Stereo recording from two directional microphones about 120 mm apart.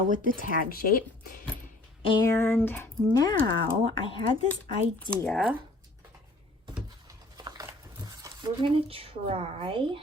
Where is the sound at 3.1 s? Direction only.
30° left (ahead or behind).